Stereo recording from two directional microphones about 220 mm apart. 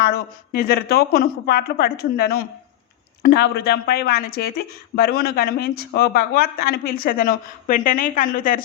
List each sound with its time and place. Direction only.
0.0 s speech: 45° left (ahead or behind)